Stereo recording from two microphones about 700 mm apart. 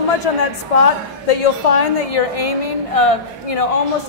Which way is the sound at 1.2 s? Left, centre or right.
Left.